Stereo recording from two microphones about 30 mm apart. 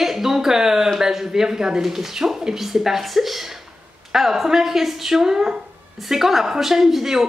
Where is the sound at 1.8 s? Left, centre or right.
Centre.